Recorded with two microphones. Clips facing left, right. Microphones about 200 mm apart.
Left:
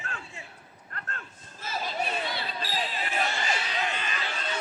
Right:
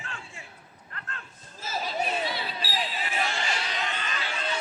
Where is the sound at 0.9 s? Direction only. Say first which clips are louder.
Left 2 dB; 45° left (ahead or behind).